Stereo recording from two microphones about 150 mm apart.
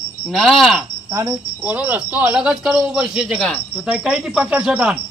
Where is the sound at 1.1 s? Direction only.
20° right (ahead or behind).